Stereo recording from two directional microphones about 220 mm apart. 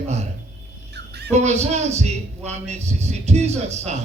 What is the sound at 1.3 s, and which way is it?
A man's voice, 30° right (ahead or behind).